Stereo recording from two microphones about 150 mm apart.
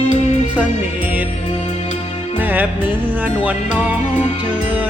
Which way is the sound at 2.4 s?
10° right (ahead or behind).